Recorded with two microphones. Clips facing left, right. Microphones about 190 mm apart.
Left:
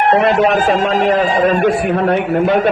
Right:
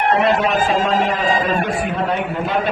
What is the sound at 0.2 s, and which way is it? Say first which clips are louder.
Speech: left 4 dB; 60° left (ahead or behind).